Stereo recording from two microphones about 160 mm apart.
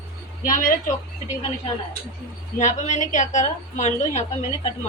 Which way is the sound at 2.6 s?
50° left (ahead or behind).